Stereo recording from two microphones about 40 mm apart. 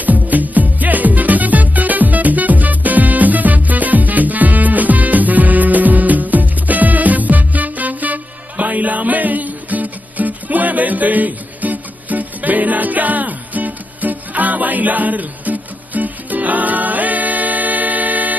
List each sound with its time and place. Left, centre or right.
0.0 s music: right